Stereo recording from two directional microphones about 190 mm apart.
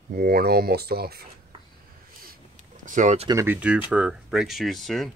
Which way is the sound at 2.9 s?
40° right (ahead or behind).